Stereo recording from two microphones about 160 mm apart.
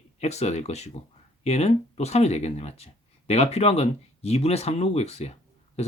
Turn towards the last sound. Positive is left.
turn(degrees=40)  # may be behind; listen again after turning